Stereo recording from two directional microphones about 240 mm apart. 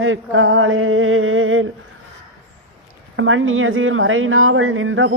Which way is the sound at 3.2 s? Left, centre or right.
Right.